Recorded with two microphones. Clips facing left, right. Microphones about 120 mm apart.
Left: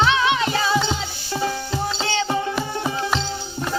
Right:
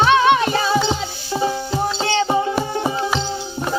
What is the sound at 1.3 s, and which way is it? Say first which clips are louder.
Music: right 4 dB; 20° right (ahead or behind).